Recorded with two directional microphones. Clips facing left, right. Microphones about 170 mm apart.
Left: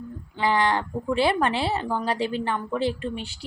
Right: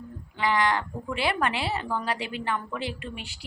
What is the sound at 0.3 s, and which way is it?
A woman's voice, 30° left (ahead or behind).